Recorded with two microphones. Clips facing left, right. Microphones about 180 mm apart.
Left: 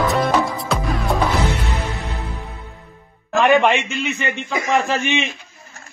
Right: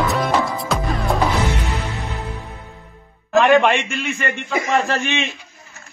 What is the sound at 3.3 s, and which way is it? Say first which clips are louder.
A man's voice: right 1 dB; 15° left (ahead or behind).